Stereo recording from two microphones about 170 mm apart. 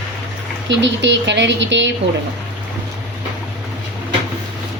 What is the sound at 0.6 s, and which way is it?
A woman's voice, 90° right.